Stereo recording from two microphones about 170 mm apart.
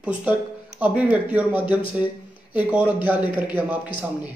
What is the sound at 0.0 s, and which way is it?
Speech, 10° right (ahead or behind).